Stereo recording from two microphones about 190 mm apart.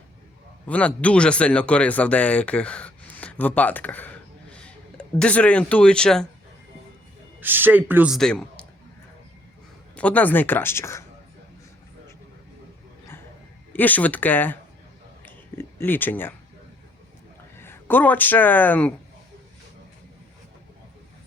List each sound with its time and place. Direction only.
0.7 s speech: 5° left (ahead or behind)
7.3 s a man's voice: 10° right (ahead or behind)
9.9 s speech: 5° left (ahead or behind)
13.7 s speech: 10° left (ahead or behind)
15.2 s a sound: 10° left (ahead or behind)
17.6 s speech: 10° left (ahead or behind)